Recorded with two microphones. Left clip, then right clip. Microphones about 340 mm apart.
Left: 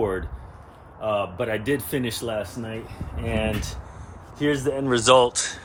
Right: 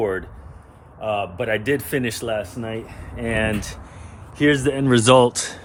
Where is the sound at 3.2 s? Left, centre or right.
Right.